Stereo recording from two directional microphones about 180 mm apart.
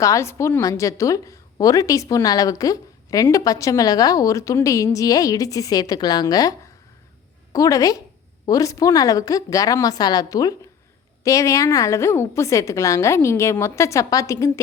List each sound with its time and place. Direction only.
0.0 s a woman's voice: 15° left (ahead or behind)